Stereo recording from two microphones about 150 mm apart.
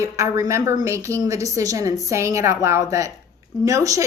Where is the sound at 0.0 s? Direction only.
20° right (ahead or behind).